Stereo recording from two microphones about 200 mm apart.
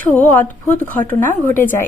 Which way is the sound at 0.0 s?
10° left (ahead or behind).